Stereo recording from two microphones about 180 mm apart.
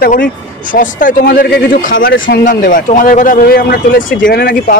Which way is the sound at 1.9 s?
90° left.